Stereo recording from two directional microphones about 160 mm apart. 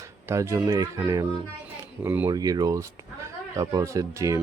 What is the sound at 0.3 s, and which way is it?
Speech, 20° right (ahead or behind).